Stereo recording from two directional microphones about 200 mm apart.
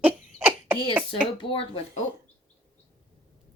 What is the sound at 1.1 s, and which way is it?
Speech, 25° left (ahead or behind).